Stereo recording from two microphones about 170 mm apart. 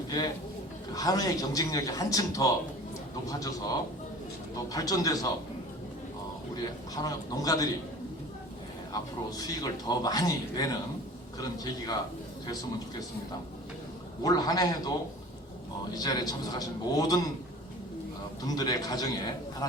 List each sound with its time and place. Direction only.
0.9 s a man's voice: 20° left (ahead or behind)
6.9 s a man's voice: 20° left (ahead or behind)
9.4 s a man's voice: 20° left (ahead or behind)
14.3 s a man's voice: 20° left (ahead or behind)
16.0 s a man's voice: 25° left (ahead or behind)
18.4 s a man's voice: 25° left (ahead or behind)